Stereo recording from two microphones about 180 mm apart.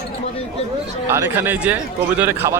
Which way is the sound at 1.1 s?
15° right (ahead or behind).